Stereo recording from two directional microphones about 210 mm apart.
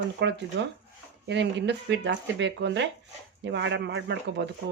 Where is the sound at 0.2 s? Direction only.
55° right (ahead or behind).